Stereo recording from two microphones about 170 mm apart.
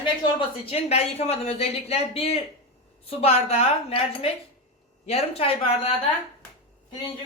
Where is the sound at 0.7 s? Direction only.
40° left (ahead or behind).